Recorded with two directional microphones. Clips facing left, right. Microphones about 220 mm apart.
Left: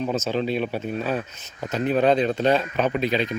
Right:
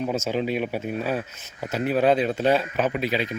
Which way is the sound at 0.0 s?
10° right (ahead or behind).